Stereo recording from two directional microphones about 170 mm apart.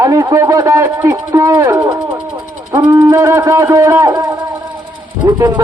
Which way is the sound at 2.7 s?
20° right (ahead or behind).